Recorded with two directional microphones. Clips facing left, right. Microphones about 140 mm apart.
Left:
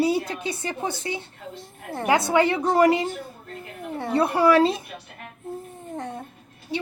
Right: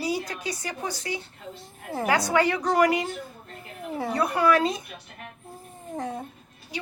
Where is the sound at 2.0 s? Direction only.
20° left (ahead or behind).